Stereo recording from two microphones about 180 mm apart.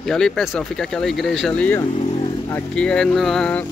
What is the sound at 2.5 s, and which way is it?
Speech, 5° left (ahead or behind).